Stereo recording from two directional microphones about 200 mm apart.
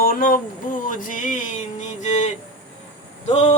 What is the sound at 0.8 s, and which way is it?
Mantra, 40° left (ahead or behind).